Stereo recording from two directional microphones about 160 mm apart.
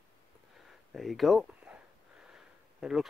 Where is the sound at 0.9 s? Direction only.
Centre (ahead or behind).